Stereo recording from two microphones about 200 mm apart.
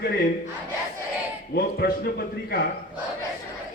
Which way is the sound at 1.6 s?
50° left (ahead or behind).